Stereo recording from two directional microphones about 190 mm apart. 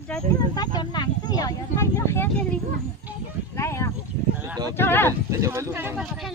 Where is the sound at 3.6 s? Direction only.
15° left (ahead or behind).